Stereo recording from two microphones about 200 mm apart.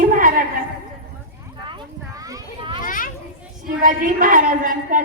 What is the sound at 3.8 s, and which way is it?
Speech, 40° right (ahead or behind).